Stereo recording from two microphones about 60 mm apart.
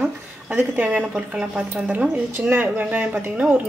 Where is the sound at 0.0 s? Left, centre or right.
Right.